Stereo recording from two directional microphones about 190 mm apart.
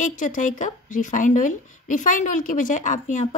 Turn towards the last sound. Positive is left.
turn(degrees=40)  # may be behind; listen again after turning